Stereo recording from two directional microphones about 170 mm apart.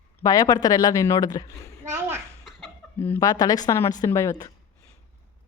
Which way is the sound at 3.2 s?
20° left (ahead or behind).